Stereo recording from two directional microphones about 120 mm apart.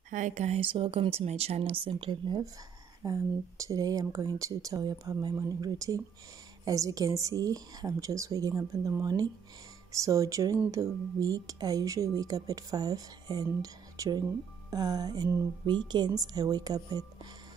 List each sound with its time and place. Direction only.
0.1 s speech: 80° right; by 2.4 s 45° right (ahead or behind)
3.0 s speech: 30° right (ahead or behind)